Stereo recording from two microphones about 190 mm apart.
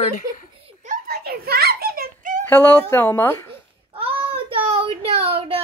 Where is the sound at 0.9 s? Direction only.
50° right (ahead or behind).